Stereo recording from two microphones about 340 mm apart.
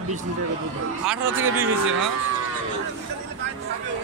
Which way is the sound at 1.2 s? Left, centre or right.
Right.